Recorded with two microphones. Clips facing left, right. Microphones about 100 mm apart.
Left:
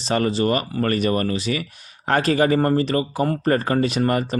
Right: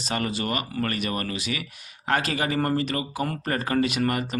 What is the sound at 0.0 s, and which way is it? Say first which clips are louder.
Speech: left 8 dB; 35° left (ahead or behind).